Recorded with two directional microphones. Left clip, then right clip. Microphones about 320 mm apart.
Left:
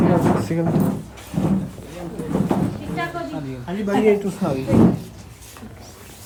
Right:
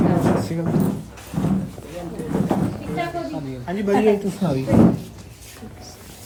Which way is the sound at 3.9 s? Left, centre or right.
Centre.